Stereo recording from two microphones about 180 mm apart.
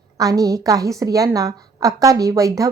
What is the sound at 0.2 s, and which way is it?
A woman's voice, 20° right (ahead or behind).